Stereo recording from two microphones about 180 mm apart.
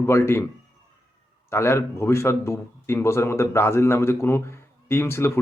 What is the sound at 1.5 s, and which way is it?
Speech, 15° left (ahead or behind).